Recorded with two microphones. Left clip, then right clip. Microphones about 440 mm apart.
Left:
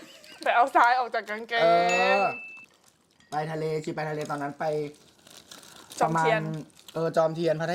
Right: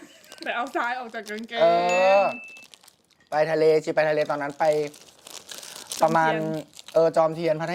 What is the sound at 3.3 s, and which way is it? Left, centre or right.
Speech, right.